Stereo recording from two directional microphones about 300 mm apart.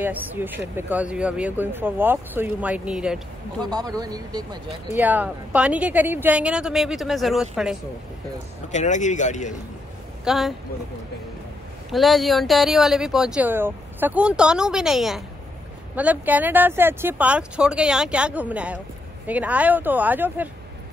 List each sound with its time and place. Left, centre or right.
0.0 s speech: centre
8.7 s speech: left
10.2 s speech: centre
11.9 s speech: centre